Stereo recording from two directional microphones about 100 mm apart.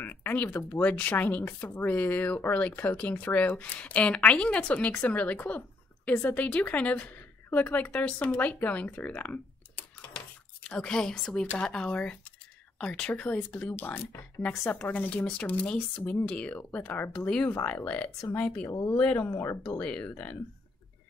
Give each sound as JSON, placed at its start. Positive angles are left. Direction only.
{"t": 0.0, "sound": "a woman's voice", "side_deg": 20}
{"t": 19.1, "sound": "speech", "side_deg": 25}
{"t": 19.8, "sound": "speech", "side_deg": 10}